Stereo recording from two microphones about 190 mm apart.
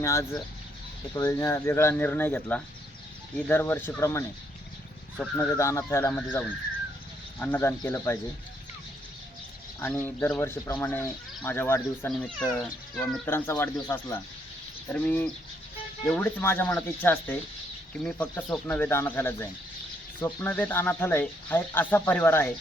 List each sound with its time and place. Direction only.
0.0 s speech: 15° left (ahead or behind)
5.4 s speech: 15° left (ahead or behind)
9.8 s speech: 10° left (ahead or behind)